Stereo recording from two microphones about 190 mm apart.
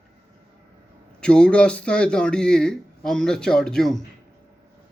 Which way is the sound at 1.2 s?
5° left (ahead or behind).